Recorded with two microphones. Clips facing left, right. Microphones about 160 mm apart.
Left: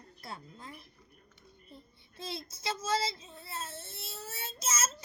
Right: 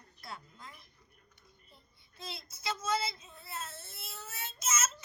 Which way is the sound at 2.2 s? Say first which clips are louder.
Left 4 dB; 30° left (ahead or behind).